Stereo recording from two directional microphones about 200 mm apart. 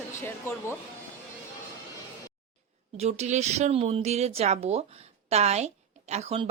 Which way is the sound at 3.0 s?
35° right (ahead or behind).